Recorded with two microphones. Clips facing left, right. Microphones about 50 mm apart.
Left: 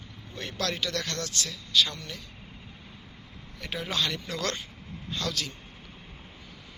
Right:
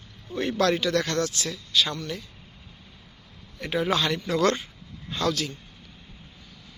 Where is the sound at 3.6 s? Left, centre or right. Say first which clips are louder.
Right 6 dB; centre.